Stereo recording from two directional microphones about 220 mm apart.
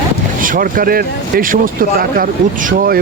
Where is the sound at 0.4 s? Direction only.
40° right (ahead or behind).